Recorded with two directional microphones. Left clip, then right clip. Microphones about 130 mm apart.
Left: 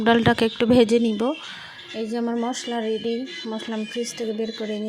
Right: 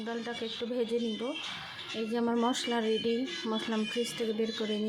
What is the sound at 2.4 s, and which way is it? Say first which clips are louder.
Speech: left 4 dB; 15° left (ahead or behind).